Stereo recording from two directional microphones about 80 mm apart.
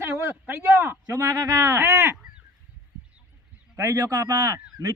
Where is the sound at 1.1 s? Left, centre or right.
Right.